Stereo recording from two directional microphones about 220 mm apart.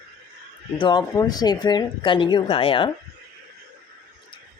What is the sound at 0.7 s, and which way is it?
Speech, 20° left (ahead or behind).